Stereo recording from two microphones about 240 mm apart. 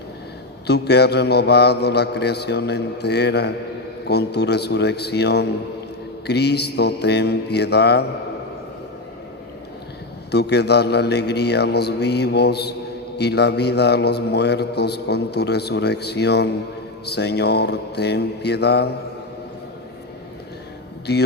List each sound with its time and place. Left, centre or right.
0.7 s a man's voice: left
10.3 s a man's voice: left
21.1 s a man's voice: left